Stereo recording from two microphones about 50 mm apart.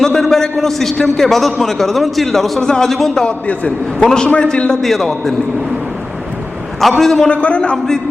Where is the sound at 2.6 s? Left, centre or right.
Centre.